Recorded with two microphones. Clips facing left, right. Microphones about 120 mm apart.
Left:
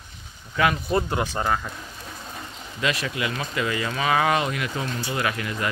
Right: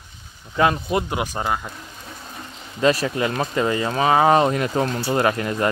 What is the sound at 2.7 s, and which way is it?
Speech, 35° right (ahead or behind).